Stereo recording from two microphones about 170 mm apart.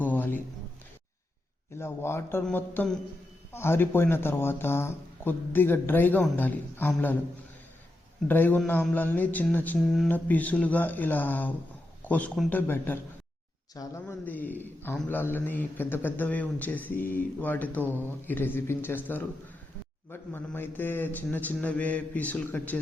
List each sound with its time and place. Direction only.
0.0 s a sound: 10° left (ahead or behind)
1.8 s a man's voice: 15° left (ahead or behind)
8.3 s a man's voice: 10° left (ahead or behind)